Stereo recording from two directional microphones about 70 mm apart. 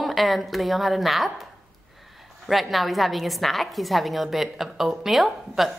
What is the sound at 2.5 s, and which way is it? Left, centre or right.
A woman's voice, centre.